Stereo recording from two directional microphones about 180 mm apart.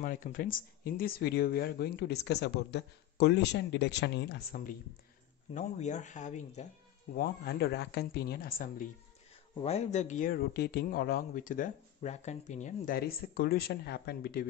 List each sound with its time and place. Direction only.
0.0 s speech: 50° left (ahead or behind)
5.5 s speech: 40° left (ahead or behind)
7.2 s speech: 60° left (ahead or behind)
9.6 s a man's voice: 35° left (ahead or behind); by 14.4 s 60° left (ahead or behind)